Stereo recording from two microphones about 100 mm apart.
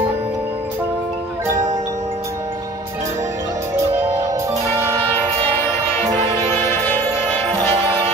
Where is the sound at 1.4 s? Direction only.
30° right (ahead or behind).